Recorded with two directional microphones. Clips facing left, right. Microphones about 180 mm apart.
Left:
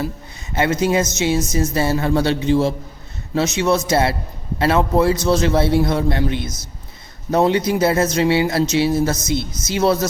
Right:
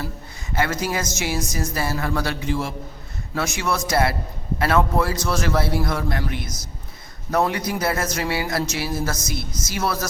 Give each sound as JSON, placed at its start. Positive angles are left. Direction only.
{"t": 0.5, "sound": "a man's voice", "side_deg": 20}